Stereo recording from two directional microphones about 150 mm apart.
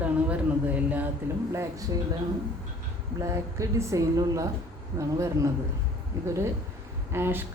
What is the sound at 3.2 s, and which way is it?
A woman's voice, 20° right (ahead or behind).